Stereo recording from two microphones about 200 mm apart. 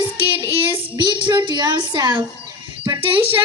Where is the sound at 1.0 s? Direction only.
25° right (ahead or behind).